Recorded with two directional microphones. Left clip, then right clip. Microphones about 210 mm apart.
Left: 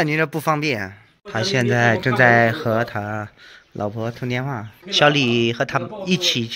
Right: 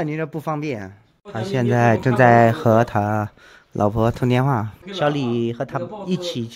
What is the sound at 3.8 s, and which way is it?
Speech, 30° right (ahead or behind).